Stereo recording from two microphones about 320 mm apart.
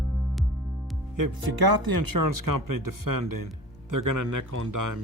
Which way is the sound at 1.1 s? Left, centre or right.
Right.